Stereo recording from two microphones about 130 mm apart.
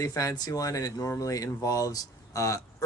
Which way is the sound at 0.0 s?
25° left (ahead or behind).